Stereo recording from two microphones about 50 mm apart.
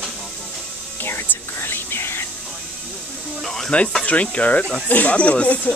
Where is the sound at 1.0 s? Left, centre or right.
Left.